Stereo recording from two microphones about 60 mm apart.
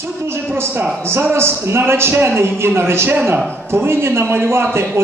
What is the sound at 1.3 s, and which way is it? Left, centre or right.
A man's voice, right.